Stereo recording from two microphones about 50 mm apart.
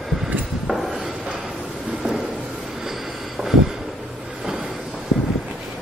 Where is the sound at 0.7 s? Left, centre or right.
Centre.